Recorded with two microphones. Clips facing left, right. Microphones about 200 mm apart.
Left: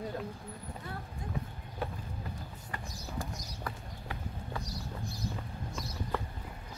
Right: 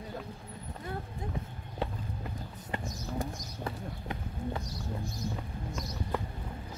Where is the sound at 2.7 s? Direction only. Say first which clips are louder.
Right 6 dB; 20° right (ahead or behind).